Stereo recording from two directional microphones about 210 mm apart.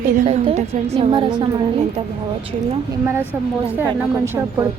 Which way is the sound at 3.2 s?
10° left (ahead or behind).